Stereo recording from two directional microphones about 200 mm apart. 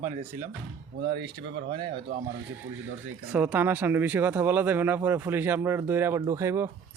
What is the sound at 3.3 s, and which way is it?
Speech, 10° right (ahead or behind).